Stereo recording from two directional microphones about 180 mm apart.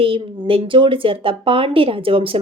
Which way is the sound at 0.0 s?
30° right (ahead or behind).